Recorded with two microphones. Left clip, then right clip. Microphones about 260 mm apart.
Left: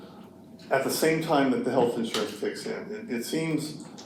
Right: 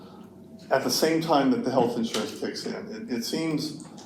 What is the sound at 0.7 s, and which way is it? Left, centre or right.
Speech, right.